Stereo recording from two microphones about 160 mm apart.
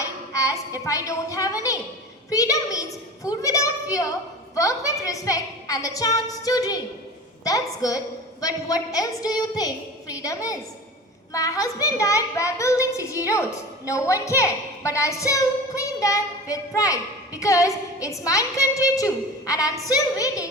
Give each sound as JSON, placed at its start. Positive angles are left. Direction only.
{"t": 0.0, "sound": "a woman's voice", "side_deg": 20}